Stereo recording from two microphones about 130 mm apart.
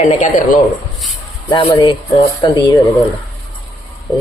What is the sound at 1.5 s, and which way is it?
Speech, 35° left (ahead or behind).